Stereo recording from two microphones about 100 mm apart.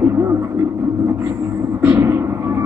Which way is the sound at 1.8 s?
20° right (ahead or behind).